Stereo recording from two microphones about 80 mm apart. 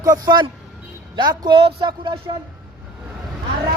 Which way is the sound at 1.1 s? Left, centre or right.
Right.